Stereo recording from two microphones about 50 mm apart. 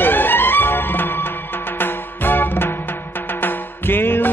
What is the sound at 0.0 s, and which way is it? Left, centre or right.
Music, left.